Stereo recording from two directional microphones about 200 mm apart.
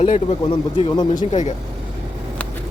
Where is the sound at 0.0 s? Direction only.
30° left (ahead or behind).